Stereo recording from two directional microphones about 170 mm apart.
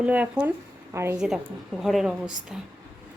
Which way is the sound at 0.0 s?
10° right (ahead or behind).